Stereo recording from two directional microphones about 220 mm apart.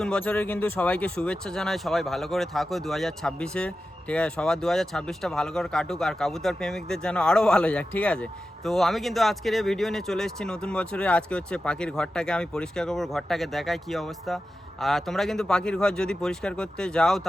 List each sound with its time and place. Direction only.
0.0 s speech: 5° left (ahead or behind)